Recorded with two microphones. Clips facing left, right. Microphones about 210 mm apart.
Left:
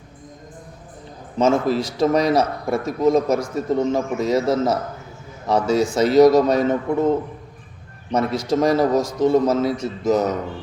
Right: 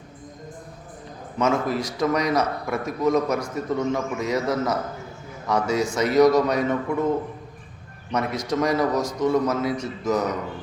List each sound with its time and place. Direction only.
1.4 s a man's voice: 30° left (ahead or behind)
8.1 s a man's voice: 30° left (ahead or behind)